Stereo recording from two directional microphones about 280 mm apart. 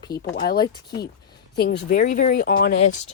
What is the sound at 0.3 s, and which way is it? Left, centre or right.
Speech, left.